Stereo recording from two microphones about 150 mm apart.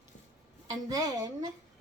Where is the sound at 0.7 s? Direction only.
25° right (ahead or behind).